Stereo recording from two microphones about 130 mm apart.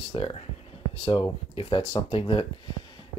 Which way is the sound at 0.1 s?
45° left (ahead or behind).